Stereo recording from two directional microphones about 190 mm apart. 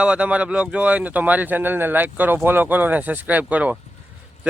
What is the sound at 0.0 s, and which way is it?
Speech, 5° right (ahead or behind).